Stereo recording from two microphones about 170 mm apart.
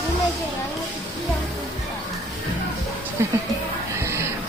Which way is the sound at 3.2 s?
15° right (ahead or behind).